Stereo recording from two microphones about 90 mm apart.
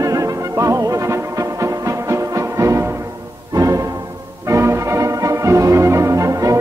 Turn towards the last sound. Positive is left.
turn(degrees=-40)  # may be behind; listen again after turning